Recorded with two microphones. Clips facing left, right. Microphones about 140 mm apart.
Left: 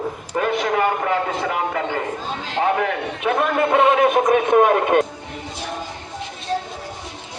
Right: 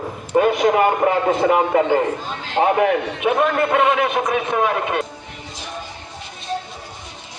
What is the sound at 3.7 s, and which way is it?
A man's voice, 40° left (ahead or behind).